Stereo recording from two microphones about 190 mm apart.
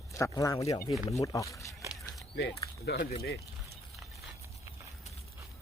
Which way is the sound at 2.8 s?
55° left (ahead or behind).